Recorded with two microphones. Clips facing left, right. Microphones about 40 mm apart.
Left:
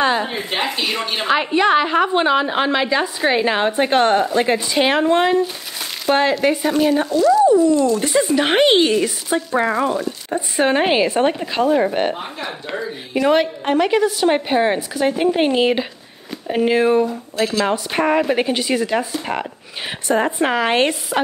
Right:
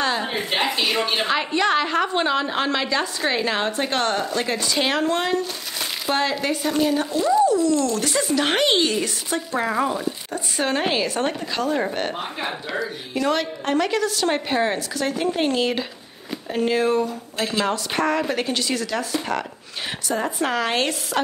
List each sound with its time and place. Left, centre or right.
0.0 s a sound: centre
0.3 s a woman's voice: centre
1.2 s a woman's voice: centre
6.1 s speech: centre
7.1 s speech: centre
7.4 s a woman's voice: left
10.3 s a woman's voice: left
13.1 s a woman's voice: centre
20.1 s a woman's voice: left